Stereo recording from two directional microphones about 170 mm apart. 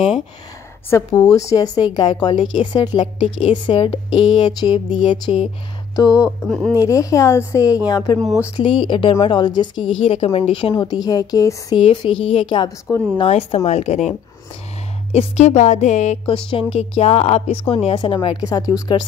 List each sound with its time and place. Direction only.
0.8 s a woman's voice: 10° left (ahead or behind)
6.4 s speech: 5° left (ahead or behind)
6.8 s speech: 20° left (ahead or behind)
8.2 s speech: centre (ahead or behind)
8.5 s a woman's voice: 30° left (ahead or behind)
13.2 s a woman's voice: 40° left (ahead or behind)
15.1 s a woman's voice: 40° left (ahead or behind); by 19.0 s 25° left (ahead or behind)